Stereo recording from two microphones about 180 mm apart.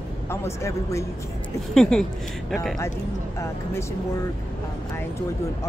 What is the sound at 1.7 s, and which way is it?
Speech, 5° left (ahead or behind).